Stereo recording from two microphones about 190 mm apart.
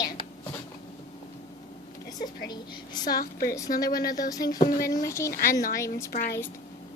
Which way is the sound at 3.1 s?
50° left (ahead or behind).